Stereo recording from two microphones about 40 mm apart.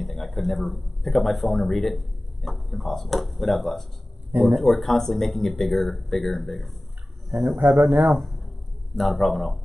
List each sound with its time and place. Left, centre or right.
0.0 s speech: centre
4.3 s speech: right
4.6 s speech: centre